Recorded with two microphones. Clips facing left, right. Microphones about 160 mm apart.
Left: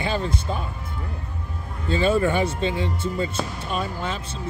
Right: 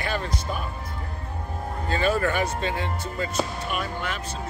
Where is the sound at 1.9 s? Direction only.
25° left (ahead or behind).